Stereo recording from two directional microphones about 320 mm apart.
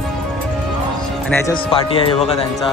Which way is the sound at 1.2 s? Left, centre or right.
Centre.